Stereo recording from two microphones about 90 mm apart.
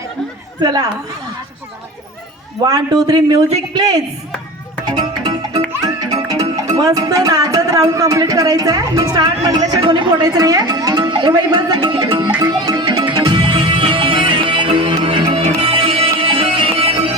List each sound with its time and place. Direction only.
0.6 s a man's voice: 50° right (ahead or behind)
2.6 s a man's voice: 45° right (ahead or behind)
4.9 s music: 55° right (ahead or behind)
9.8 s speech: 65° right (ahead or behind)
10.2 s speech: 40° right (ahead or behind)
12.4 s music: 45° right (ahead or behind); by 17.1 s 90° right